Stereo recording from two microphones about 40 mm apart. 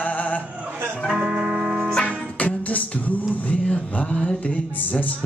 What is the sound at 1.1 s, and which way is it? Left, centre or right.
Music, right.